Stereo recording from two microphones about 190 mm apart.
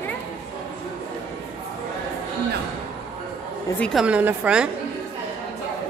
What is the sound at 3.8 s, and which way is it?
Speech, centre (ahead or behind).